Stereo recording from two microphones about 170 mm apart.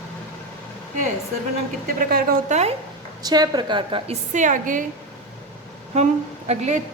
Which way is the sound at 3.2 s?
25° right (ahead or behind).